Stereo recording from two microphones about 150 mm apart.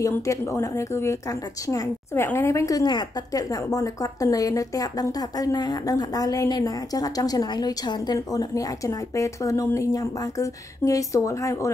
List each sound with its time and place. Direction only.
0.0 s a woman's voice: 20° left (ahead or behind)